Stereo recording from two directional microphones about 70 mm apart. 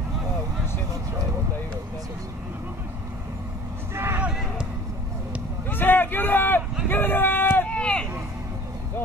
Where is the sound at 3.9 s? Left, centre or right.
Right.